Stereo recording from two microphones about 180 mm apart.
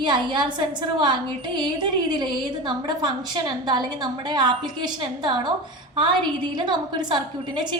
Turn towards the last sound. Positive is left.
turn(degrees=-25)  # may be behind; listen again after turning